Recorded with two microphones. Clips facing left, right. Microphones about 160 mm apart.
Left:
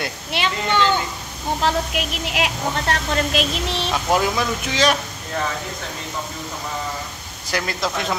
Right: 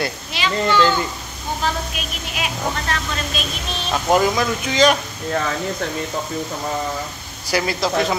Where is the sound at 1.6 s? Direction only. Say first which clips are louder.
Left 4 dB; 75° left (ahead or behind).